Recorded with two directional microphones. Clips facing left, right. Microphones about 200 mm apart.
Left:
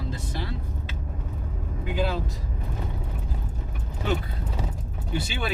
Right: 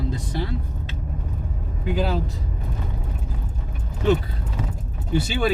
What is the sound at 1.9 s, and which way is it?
Speech, 40° right (ahead or behind).